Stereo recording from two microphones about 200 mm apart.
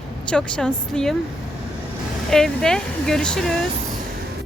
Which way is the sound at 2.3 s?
Centre (ahead or behind).